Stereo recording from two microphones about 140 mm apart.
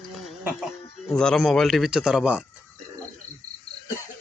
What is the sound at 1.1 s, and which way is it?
Speech, 5° left (ahead or behind).